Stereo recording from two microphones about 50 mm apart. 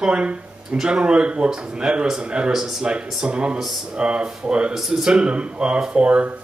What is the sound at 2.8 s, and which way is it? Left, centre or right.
Speech, centre.